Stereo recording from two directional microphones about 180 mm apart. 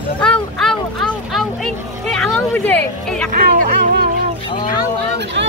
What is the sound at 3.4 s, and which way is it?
Speech, 60° right (ahead or behind).